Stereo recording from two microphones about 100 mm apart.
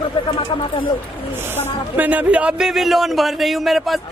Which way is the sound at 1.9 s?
15° right (ahead or behind).